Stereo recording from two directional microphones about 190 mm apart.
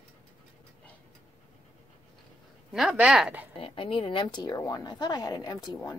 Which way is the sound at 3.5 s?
25° left (ahead or behind).